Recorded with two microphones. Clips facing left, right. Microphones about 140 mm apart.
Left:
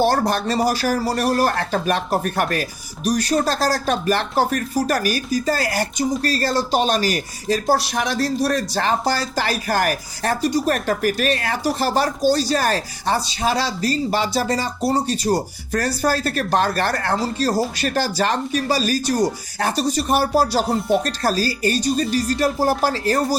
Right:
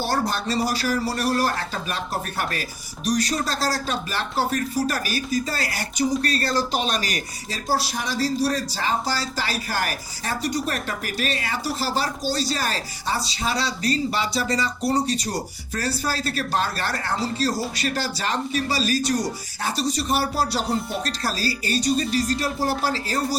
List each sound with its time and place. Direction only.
0.3 s speech: 55° left (ahead or behind); by 7.2 s 35° left (ahead or behind)
7.4 s speech: 50° left (ahead or behind)
7.9 s speech: 65° left (ahead or behind)
9.3 s speech: 50° left (ahead or behind)